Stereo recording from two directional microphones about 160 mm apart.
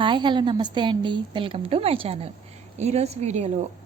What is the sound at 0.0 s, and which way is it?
A woman's voice, 30° right (ahead or behind).